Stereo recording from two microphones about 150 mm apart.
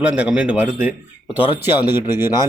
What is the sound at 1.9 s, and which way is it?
Speech, 15° right (ahead or behind).